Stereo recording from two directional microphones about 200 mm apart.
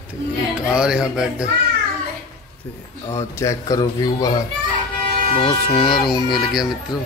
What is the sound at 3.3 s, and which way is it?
Speech, 15° left (ahead or behind).